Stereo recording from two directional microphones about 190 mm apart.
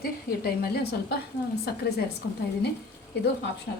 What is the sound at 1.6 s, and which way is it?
Speech, 55° left (ahead or behind).